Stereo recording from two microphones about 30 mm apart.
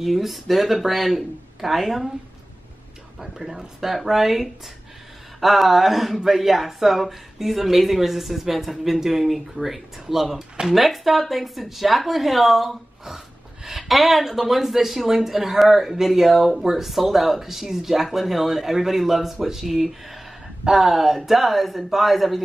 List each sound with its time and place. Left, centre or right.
0.0 s speech: centre
3.2 s speech: centre